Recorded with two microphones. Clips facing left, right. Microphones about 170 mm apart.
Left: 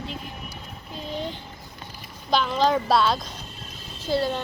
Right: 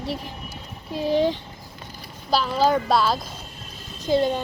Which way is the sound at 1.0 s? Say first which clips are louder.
Right 11 dB; 80° right.